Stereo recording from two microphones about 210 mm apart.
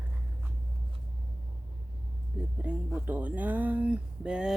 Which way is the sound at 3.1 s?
10° right (ahead or behind).